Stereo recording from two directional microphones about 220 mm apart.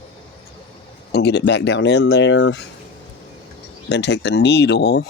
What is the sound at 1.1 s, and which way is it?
Speech, 50° left (ahead or behind).